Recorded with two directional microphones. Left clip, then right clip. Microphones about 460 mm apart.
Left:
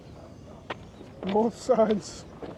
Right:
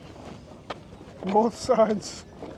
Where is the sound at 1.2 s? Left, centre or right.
Centre.